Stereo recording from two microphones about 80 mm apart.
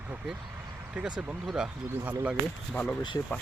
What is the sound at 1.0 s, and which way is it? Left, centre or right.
Speech, centre.